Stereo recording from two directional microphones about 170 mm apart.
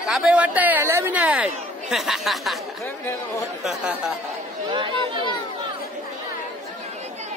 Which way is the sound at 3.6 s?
5° right (ahead or behind).